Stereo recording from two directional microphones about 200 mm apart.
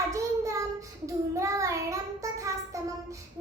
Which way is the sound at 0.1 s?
15° right (ahead or behind).